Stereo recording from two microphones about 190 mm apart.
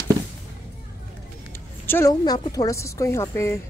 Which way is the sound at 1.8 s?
15° left (ahead or behind).